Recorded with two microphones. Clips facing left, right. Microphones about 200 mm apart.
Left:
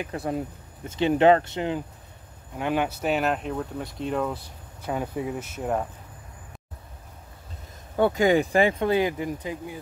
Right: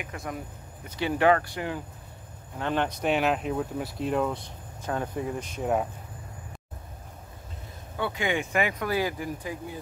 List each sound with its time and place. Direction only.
0.0 s speech: 35° left (ahead or behind)
2.6 s speech: 10° left (ahead or behind)
7.9 s speech: 45° left (ahead or behind); by 9.8 s 20° left (ahead or behind)